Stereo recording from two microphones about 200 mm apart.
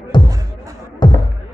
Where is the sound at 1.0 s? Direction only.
25° left (ahead or behind).